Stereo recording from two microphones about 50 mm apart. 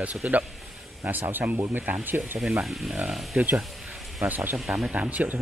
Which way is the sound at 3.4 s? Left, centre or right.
Right.